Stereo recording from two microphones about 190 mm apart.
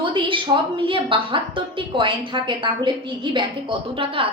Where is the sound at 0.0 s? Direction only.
25° right (ahead or behind).